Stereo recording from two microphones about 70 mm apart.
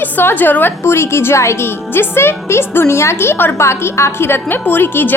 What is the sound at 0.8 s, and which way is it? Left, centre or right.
A woman's voice, left.